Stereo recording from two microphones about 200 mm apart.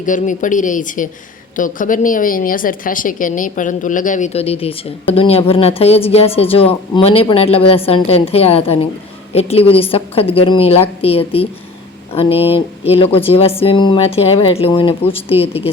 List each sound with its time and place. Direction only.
0.0 s a woman's voice: 40° left (ahead or behind)